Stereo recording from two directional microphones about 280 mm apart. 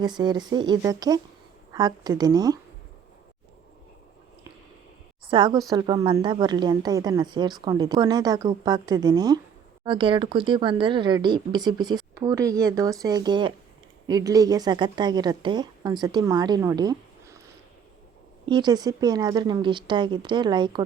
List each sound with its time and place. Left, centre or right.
0.0 s speech: centre
5.3 s speech: centre
18.4 s speech: centre